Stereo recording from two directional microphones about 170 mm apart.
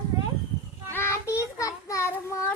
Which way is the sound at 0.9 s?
15° left (ahead or behind).